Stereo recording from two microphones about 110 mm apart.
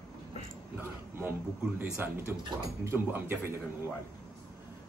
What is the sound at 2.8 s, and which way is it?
Speech, 20° right (ahead or behind).